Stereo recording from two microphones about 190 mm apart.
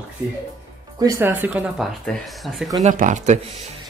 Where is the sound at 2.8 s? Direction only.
40° right (ahead or behind).